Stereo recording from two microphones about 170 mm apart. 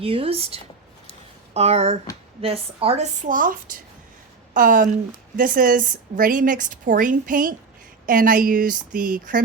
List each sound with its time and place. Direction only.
0.0 s speech: 35° right (ahead or behind)
3.2 s a woman's voice: 55° right (ahead or behind)